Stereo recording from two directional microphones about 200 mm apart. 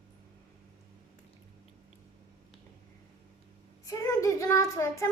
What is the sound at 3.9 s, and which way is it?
Child singing, 15° left (ahead or behind).